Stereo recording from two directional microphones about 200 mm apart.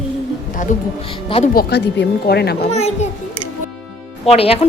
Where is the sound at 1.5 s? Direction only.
55° left (ahead or behind).